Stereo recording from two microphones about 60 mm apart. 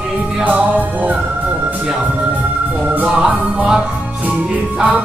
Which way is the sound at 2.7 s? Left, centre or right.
Right.